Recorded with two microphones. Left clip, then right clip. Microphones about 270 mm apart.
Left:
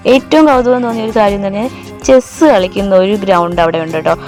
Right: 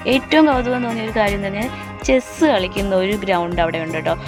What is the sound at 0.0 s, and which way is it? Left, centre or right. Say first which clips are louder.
A woman's voice: left 7 dB; centre.